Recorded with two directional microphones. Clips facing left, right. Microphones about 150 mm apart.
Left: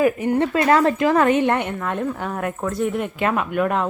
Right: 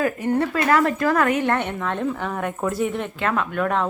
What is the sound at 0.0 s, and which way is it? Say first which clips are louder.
A woman's voice: left 3 dB; 15° left (ahead or behind).